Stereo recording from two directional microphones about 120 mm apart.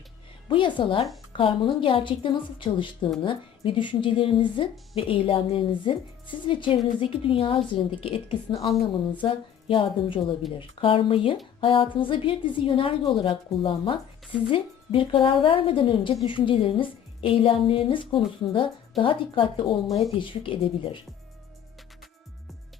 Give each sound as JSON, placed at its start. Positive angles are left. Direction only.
{"t": 0.4, "sound": "a woman's voice", "side_deg": 45}